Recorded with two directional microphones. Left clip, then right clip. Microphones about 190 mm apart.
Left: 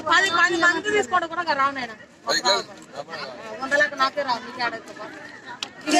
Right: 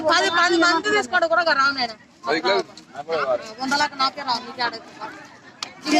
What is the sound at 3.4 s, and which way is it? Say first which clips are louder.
Speech: left 1 dB; 15° right (ahead or behind).